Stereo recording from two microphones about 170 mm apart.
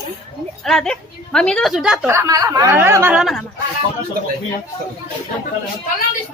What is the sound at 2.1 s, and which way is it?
Speech, 20° right (ahead or behind).